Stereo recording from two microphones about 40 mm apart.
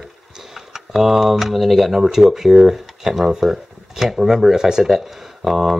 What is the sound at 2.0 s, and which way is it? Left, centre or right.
Speech, centre.